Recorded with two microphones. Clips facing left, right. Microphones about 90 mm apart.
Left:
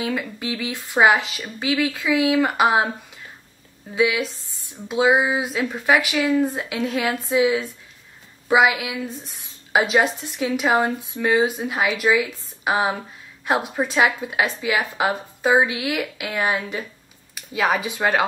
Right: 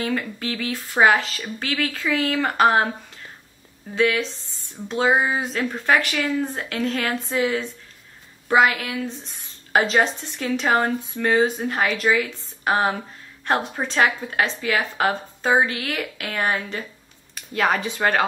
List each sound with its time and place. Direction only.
0.0 s speech: 5° left (ahead or behind)
3.9 s speech: 10° left (ahead or behind)